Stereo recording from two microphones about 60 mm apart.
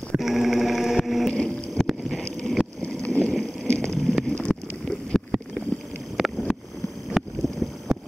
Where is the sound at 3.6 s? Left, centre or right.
Centre.